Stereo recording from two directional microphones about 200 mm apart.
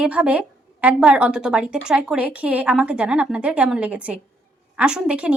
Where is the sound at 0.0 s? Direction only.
5° right (ahead or behind).